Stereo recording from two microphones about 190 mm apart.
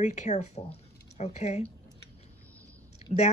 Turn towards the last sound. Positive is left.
turn(degrees=35)  # may be behind; listen again after turning